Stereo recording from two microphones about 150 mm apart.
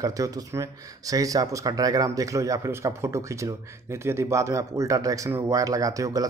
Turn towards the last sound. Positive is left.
turn(degrees=-20)  # may be behind; listen again after turning